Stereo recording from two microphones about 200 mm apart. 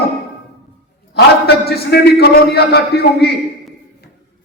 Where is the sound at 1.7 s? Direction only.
50° left (ahead or behind).